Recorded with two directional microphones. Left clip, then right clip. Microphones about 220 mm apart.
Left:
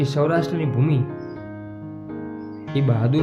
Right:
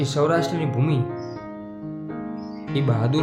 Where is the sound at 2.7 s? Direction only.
15° right (ahead or behind).